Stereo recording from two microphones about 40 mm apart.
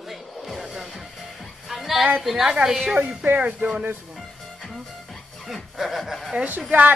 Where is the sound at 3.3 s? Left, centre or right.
Right.